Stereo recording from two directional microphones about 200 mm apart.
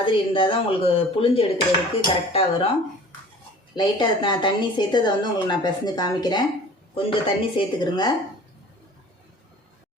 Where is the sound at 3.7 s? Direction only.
20° left (ahead or behind).